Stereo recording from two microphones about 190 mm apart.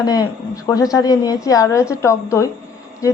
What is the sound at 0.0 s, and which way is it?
A woman's voice, 20° left (ahead or behind).